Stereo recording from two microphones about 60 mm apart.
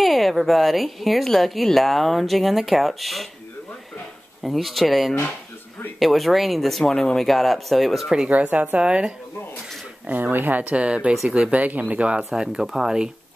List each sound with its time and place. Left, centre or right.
0.0 s speech: centre
4.4 s speech: centre
8.3 s speech: right
10.0 s speech: right
12.3 s speech: centre